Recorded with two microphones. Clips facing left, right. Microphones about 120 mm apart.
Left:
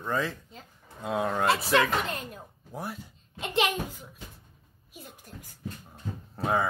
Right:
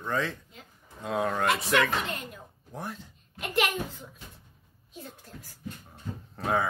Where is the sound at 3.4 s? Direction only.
25° left (ahead or behind).